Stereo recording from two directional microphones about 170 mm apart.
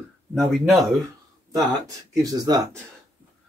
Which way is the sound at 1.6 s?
20° right (ahead or behind).